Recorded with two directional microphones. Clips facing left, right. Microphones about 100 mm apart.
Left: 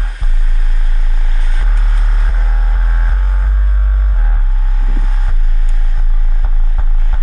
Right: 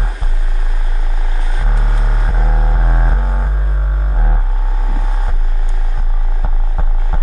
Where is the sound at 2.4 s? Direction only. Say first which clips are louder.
Right 6 dB; 15° right (ahead or behind).